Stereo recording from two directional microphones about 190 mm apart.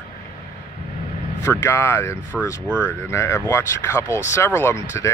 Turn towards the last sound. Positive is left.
turn(degrees=15)  # may be behind; listen again after turning